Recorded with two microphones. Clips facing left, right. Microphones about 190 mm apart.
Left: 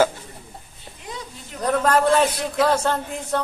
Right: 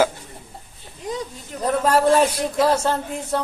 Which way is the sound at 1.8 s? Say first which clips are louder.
Right 2 dB; 5° right (ahead or behind).